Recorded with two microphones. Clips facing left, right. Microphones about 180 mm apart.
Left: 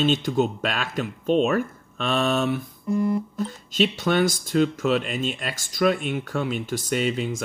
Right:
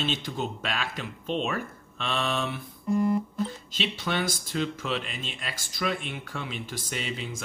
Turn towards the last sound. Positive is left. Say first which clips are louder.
# left 10 dB
turn(degrees=45)  # may be behind; listen again after turning